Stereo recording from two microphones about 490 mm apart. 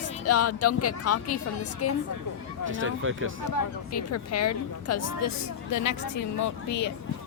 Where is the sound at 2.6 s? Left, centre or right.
Right.